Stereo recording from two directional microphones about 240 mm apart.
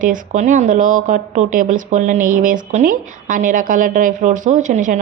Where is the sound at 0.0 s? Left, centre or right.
Right.